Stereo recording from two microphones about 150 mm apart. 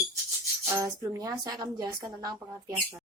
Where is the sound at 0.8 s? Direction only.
25° right (ahead or behind).